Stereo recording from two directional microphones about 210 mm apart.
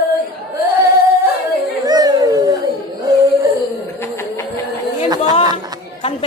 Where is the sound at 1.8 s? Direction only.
20° right (ahead or behind).